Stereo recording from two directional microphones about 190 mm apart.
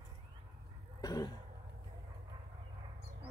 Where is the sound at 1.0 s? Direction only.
20° left (ahead or behind).